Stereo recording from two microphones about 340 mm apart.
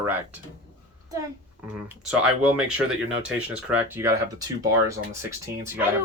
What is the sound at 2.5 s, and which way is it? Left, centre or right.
Speech, centre.